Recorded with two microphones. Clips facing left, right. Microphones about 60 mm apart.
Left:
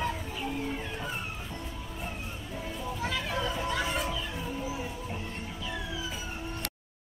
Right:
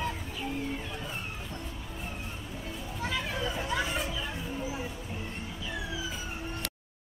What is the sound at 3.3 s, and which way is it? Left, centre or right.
Hubbub, centre.